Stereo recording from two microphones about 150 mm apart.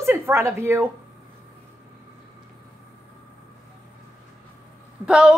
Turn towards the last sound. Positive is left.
turn(degrees=-5)  # may be behind; listen again after turning